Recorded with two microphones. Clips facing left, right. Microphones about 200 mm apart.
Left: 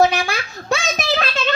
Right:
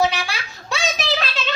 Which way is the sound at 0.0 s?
50° left (ahead or behind).